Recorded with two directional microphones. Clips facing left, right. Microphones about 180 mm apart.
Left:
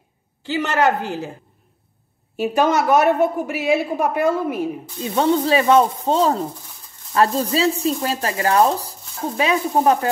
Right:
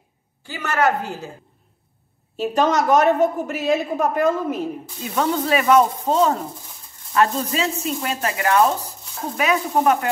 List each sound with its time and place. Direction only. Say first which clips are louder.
0.6 s a woman's voice: left 2 dB; 15° left (ahead or behind)
2.3 s a woman's voice: left 1 dB; 10° left (ahead or behind)
5.0 s speech: left 4 dB; 25° left (ahead or behind)